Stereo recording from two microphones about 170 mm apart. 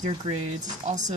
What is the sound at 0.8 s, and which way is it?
Speech, 40° right (ahead or behind).